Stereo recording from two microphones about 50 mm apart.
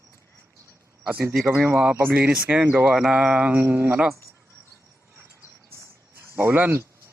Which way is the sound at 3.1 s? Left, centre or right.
Right.